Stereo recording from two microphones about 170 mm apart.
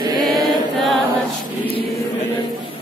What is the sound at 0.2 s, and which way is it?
Choir, centre (ahead or behind).